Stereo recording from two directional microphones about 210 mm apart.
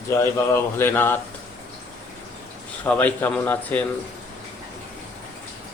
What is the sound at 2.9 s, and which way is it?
Speech, 10° left (ahead or behind).